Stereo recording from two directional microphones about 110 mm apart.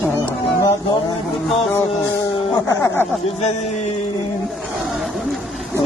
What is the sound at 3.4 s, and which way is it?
Speech, 90° left.